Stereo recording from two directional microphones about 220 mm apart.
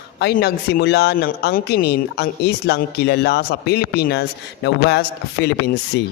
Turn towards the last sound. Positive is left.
turn(degrees=50)  # may be behind; listen again after turning